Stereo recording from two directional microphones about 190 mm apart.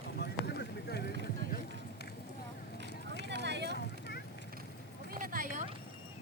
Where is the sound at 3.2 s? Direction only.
65° right (ahead or behind).